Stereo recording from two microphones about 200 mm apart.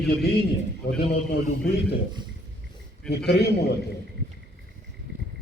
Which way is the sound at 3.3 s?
55° left (ahead or behind).